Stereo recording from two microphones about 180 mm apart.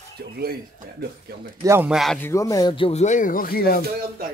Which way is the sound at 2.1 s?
15° left (ahead or behind).